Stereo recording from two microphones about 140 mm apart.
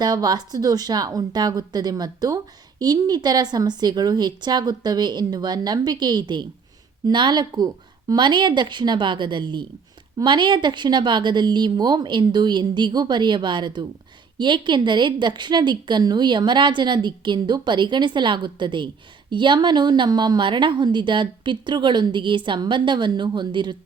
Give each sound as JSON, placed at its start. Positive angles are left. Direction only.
{"t": 0.0, "sound": "a woman's voice", "side_deg": -30}